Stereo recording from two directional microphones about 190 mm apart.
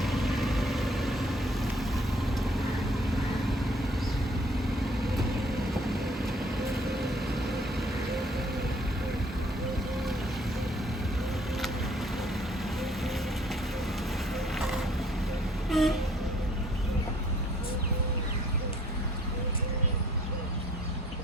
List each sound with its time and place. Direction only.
0.0 s vehicle: centre (ahead or behind)
15.7 s vehicle: centre (ahead or behind)